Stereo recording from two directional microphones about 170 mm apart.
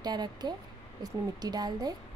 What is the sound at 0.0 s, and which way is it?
A woman's voice, 25° right (ahead or behind).